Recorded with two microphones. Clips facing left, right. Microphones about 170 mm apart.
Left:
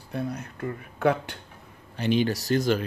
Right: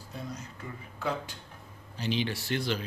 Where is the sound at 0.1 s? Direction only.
60° left (ahead or behind).